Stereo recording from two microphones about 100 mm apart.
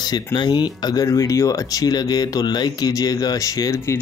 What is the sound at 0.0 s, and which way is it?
Speech, 45° left (ahead or behind).